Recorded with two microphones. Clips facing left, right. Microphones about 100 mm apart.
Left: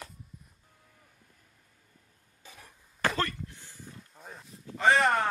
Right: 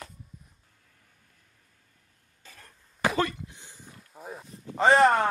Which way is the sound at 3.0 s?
15° right (ahead or behind).